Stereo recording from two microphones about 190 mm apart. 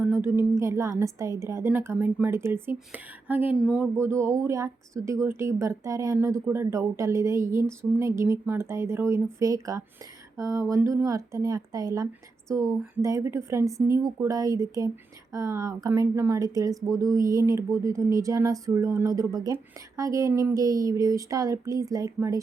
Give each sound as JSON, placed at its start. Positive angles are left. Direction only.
{"t": 0.0, "sound": "speech", "side_deg": -10}